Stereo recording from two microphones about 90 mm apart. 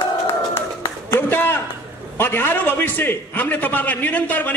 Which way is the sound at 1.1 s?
25° left (ahead or behind).